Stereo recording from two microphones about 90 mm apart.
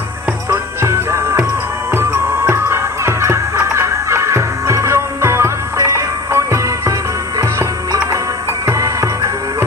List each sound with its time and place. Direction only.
0.5 s music: 30° right (ahead or behind)